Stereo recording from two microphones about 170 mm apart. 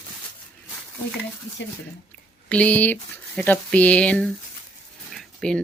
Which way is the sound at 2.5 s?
10° left (ahead or behind).